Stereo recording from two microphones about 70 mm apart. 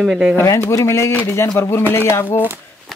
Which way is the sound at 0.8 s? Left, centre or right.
Left.